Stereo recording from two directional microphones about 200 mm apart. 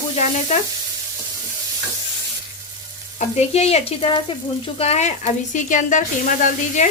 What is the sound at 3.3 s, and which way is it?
Speech, 35° left (ahead or behind).